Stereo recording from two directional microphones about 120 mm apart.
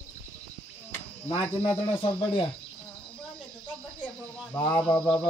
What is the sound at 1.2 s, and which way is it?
Speech, 55° left (ahead or behind).